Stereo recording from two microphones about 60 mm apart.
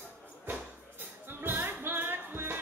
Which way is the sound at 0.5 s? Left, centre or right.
Right.